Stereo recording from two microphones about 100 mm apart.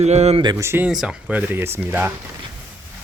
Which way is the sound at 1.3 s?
20° right (ahead or behind).